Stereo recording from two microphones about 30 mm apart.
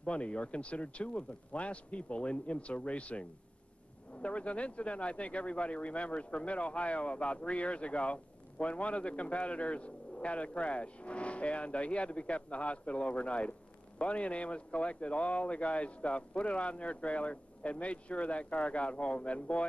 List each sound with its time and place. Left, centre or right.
0.0 s speech: left